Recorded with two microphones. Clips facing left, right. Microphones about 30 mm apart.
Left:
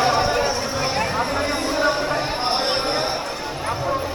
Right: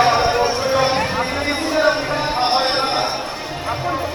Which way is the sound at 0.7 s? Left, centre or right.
Right.